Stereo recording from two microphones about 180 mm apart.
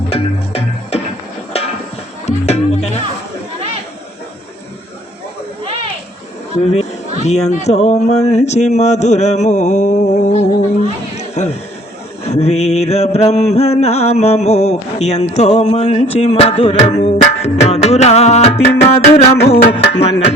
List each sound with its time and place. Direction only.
0.1 s music: 35° left (ahead or behind)
2.2 s music: 35° left (ahead or behind)
6.7 s speech: 35° left (ahead or behind)
8.3 s a sound: 40° left (ahead or behind)
10.8 s chatter: 40° left (ahead or behind)
12.2 s a sound: 35° left (ahead or behind)